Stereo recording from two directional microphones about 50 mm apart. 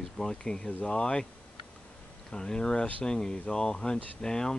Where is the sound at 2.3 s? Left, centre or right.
Centre.